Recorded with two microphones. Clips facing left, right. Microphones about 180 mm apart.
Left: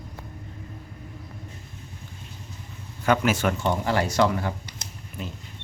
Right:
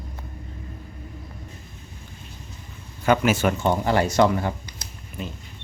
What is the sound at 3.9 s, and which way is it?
Speech, 20° right (ahead or behind).